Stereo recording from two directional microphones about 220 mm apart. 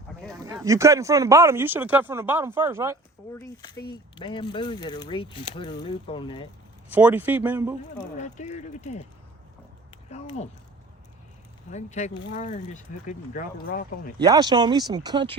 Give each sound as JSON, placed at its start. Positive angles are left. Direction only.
{"t": 0.4, "sound": "speech", "side_deg": -15}
{"t": 3.3, "sound": "speech", "side_deg": 15}
{"t": 6.9, "sound": "speech", "side_deg": -10}
{"t": 8.2, "sound": "speech", "side_deg": 30}
{"t": 10.1, "sound": "speech", "side_deg": 30}
{"t": 11.7, "sound": "speech", "side_deg": 35}
{"t": 14.2, "sound": "speech", "side_deg": -20}